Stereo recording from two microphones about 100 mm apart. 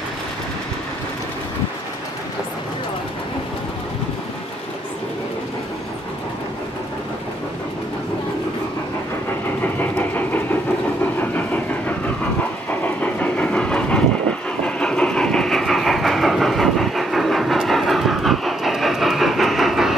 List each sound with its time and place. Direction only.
9.6 s vehicle: 15° left (ahead or behind)
12.8 s train: 15° left (ahead or behind); by 20.0 s centre (ahead or behind)